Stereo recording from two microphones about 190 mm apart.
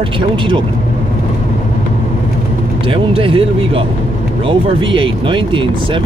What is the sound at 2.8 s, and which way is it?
Speech, 30° right (ahead or behind).